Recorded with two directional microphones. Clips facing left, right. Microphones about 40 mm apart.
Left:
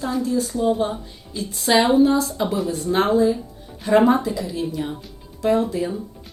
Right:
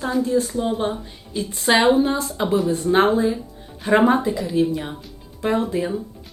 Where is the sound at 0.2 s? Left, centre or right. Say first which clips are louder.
Right 4 dB; right.